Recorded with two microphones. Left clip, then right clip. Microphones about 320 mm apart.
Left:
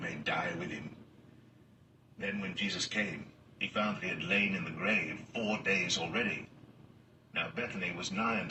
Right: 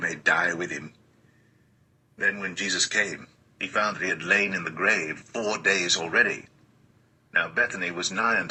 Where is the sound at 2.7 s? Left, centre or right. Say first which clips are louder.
Right 12 dB; right.